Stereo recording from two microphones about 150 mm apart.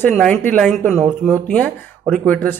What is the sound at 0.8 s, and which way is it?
Speech, 20° right (ahead or behind).